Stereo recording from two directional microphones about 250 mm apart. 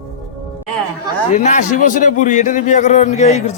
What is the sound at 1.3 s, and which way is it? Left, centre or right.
A man's voice, left.